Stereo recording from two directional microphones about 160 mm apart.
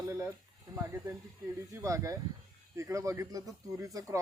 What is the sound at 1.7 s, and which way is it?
Speech, 20° right (ahead or behind).